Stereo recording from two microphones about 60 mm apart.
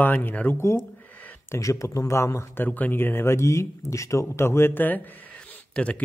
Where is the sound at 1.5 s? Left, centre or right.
Left.